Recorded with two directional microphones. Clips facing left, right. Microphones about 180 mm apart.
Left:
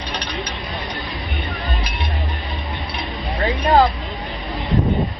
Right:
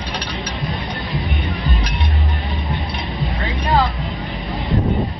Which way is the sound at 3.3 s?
35° left (ahead or behind).